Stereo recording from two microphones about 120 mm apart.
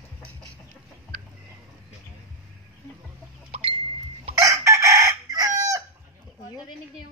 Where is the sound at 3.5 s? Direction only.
55° right (ahead or behind).